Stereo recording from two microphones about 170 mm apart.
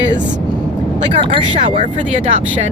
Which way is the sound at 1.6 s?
45° right (ahead or behind).